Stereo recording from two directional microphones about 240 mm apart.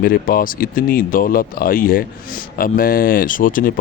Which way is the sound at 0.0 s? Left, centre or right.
Left.